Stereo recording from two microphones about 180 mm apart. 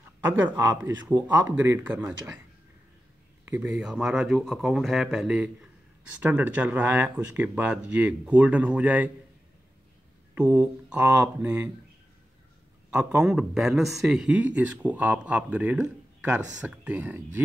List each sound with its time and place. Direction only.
0.3 s speech: 10° right (ahead or behind)
3.4 s speech: 15° right (ahead or behind)
10.3 s speech: 10° right (ahead or behind)
12.9 s speech: 5° right (ahead or behind)